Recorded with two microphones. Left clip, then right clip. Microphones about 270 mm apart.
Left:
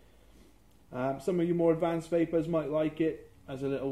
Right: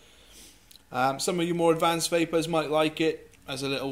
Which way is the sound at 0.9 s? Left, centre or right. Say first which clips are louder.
Right 5 dB; centre.